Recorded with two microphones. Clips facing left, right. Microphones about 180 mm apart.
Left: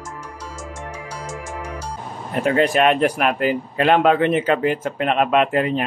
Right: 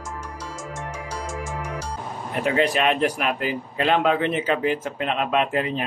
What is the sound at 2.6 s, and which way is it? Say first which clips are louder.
Speech: left 4 dB; 50° left (ahead or behind).